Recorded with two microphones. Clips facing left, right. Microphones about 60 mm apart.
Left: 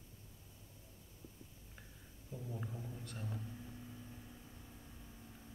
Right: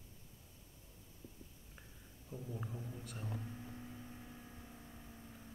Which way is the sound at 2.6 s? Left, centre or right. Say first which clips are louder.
Even; centre.